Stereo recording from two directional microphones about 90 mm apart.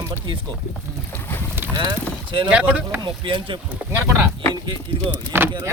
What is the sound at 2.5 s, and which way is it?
Speech, 15° right (ahead or behind).